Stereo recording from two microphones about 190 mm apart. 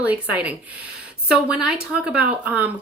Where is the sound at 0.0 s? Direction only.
10° right (ahead or behind).